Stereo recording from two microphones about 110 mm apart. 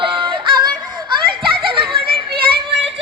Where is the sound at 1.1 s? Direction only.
50° right (ahead or behind).